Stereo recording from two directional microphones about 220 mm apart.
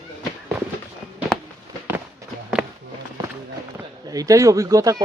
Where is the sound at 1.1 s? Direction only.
Centre (ahead or behind).